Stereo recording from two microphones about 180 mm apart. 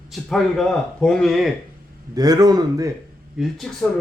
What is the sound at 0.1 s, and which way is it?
Speech, centre (ahead or behind).